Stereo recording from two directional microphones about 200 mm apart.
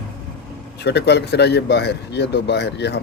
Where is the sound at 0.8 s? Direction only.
55° left (ahead or behind).